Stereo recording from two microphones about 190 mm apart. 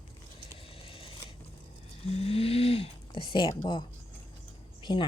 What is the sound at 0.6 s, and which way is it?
Vehicle, 30° left (ahead or behind).